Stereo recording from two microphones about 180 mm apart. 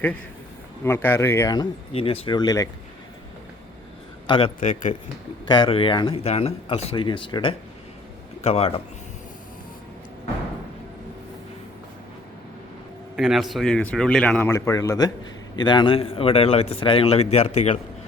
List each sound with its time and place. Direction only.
0.9 s speech: 15° left (ahead or behind)
1.9 s speech: 35° left (ahead or behind)
4.3 s speech: 30° left (ahead or behind)
4.6 s speech: 45° left (ahead or behind)
5.5 s a man's voice: 25° left (ahead or behind)
13.1 s a man's voice: centre (ahead or behind)
14.5 s a man's voice: 15° left (ahead or behind); by 17.7 s 35° left (ahead or behind)